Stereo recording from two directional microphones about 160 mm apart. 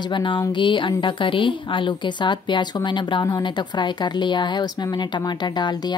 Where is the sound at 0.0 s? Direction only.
30° left (ahead or behind).